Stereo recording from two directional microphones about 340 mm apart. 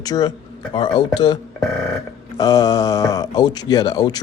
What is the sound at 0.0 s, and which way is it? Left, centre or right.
Speech, centre.